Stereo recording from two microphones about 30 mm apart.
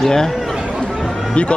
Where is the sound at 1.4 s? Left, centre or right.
Left.